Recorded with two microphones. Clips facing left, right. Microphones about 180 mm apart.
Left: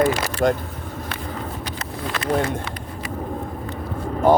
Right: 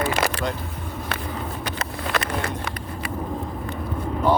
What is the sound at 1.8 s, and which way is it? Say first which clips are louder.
Vehicle: right 3 dB; 65° right (ahead or behind).